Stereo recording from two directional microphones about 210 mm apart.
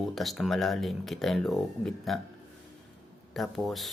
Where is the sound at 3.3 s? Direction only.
Centre (ahead or behind).